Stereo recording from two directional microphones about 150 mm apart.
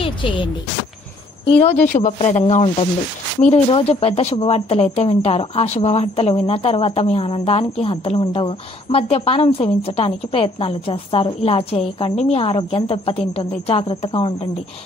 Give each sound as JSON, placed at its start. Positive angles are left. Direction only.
{"t": 0.0, "sound": "speech", "side_deg": 35}
{"t": 1.5, "sound": "speech", "side_deg": 40}
{"t": 1.9, "sound": "speech", "side_deg": 55}
{"t": 2.1, "sound": "speech", "side_deg": 45}